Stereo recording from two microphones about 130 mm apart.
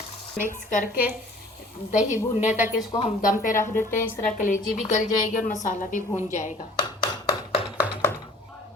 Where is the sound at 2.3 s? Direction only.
65° left (ahead or behind).